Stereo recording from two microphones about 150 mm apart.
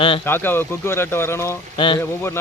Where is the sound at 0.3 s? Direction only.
15° left (ahead or behind).